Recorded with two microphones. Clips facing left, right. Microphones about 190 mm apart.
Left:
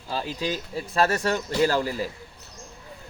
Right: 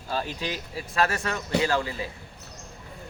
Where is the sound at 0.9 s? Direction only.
30° left (ahead or behind).